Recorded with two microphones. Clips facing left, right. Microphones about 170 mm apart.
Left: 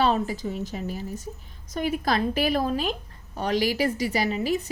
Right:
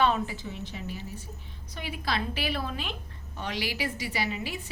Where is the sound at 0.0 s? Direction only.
40° left (ahead or behind).